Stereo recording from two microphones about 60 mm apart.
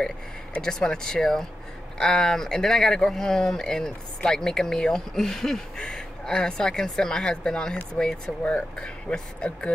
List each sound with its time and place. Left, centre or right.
0.6 s speech: centre